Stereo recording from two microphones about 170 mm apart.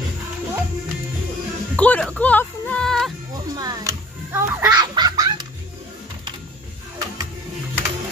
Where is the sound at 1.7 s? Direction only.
5° left (ahead or behind).